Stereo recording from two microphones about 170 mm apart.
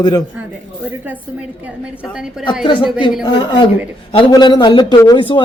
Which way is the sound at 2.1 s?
5° right (ahead or behind).